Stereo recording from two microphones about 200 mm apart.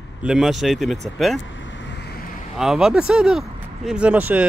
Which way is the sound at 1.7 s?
65° left (ahead or behind).